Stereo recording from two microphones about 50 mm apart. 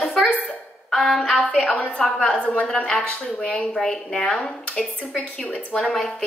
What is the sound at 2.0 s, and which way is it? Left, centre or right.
Speech, centre.